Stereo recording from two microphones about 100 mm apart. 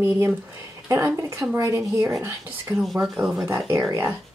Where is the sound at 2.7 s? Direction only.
Centre (ahead or behind).